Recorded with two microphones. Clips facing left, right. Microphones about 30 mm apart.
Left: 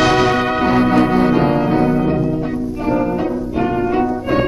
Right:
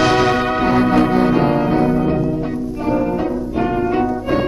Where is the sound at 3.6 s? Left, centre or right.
Centre.